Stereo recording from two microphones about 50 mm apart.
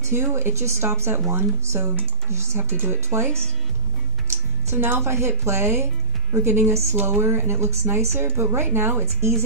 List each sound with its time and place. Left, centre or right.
0.0 s speech: right
4.6 s speech: right
6.7 s speech: right
7.1 s speech: right
9.2 s speech: right